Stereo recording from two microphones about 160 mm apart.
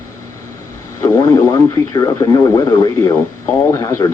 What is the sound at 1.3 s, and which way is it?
Speech, 20° left (ahead or behind).